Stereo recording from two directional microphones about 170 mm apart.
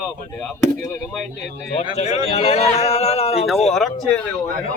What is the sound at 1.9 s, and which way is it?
A man's voice, 40° left (ahead or behind).